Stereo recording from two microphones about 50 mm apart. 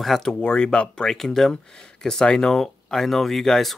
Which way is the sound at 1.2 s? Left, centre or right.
Centre.